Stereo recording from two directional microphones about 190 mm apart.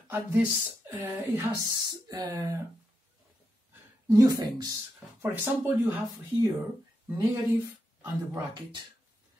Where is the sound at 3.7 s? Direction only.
15° right (ahead or behind).